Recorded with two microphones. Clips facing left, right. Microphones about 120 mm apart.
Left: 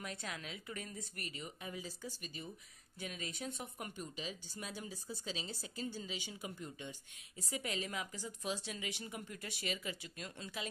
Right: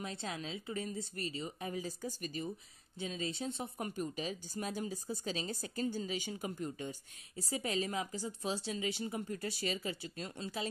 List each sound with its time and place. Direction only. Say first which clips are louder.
0.0 s a woman's voice: right 4 dB; 25° right (ahead or behind); by 2.5 s 45° right (ahead or behind)
3.0 s speech: right 6 dB; 30° right (ahead or behind)